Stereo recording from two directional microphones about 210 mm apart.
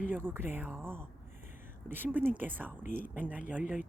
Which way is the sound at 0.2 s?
10° right (ahead or behind).